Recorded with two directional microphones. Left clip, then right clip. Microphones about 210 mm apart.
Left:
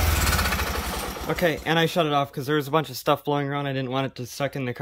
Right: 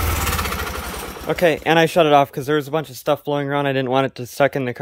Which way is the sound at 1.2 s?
5° right (ahead or behind).